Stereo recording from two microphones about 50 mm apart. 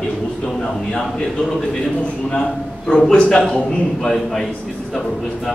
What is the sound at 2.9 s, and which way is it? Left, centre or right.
A man's voice, centre.